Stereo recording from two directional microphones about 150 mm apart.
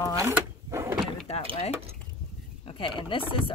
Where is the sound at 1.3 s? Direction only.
40° left (ahead or behind).